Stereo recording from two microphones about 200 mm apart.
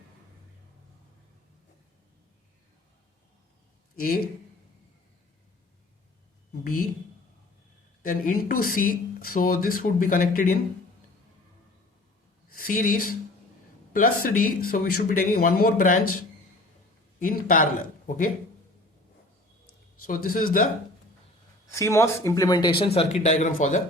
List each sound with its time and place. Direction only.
4.0 s speech: 45° left (ahead or behind)
6.5 s a sound: 45° left (ahead or behind)
8.0 s speech: 45° left (ahead or behind)
12.5 s speech: 45° left (ahead or behind)
17.2 s speech: 45° left (ahead or behind)
20.1 s speech: 45° left (ahead or behind)
21.7 s speech: 15° left (ahead or behind); by 23.8 s 40° left (ahead or behind)